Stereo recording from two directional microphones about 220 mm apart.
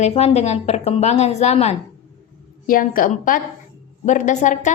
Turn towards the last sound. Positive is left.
turn(degrees=35)  # may be behind; listen again after turning